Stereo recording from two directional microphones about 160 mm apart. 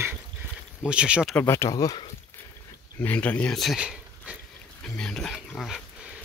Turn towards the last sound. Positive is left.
turn(degrees=0)  # may be behind; listen again after turning